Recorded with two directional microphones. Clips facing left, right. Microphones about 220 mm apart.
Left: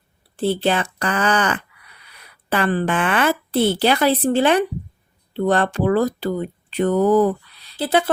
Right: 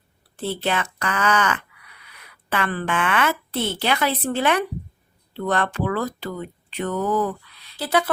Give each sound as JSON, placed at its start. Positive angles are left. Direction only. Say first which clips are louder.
{"t": 0.3, "sound": "a woman's voice", "louder": "left 6 dB", "side_deg": 30}